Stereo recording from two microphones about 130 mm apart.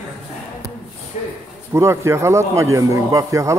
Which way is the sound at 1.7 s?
20° right (ahead or behind).